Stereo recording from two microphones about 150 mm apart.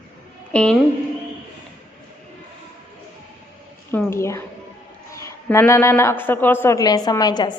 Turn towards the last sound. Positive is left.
turn(degrees=25)  # may be behind; listen again after turning